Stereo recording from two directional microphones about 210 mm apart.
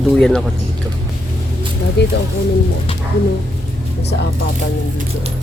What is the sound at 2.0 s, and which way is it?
Speech, 55° left (ahead or behind).